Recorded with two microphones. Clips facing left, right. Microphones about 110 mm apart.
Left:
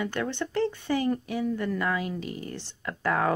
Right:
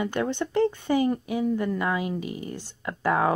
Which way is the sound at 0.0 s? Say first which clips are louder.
Right 3 dB; 20° right (ahead or behind).